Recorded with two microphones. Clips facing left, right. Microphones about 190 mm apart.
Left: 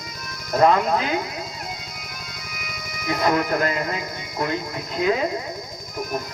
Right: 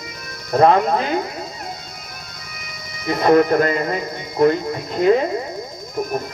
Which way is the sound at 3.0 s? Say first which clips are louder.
Right 3 dB; 30° right (ahead or behind).